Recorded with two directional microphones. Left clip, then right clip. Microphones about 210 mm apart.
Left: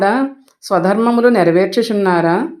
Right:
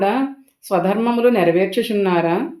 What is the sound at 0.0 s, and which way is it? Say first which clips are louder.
Speech: left 4 dB; 30° left (ahead or behind).